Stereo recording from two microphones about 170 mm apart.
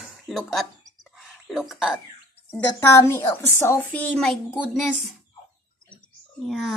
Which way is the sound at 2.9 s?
15° left (ahead or behind).